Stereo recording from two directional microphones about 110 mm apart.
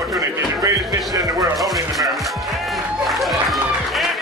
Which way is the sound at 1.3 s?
Centre (ahead or behind).